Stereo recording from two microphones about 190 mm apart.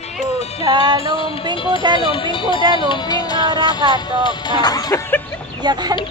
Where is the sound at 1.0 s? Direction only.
30° left (ahead or behind).